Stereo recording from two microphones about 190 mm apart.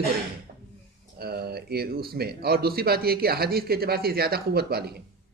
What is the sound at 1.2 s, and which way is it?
Speech, 55° right (ahead or behind).